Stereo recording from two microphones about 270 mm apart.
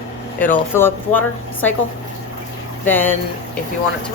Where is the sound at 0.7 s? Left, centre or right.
Centre.